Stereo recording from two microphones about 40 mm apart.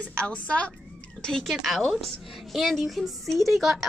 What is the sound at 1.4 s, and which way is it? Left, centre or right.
A woman's voice, centre.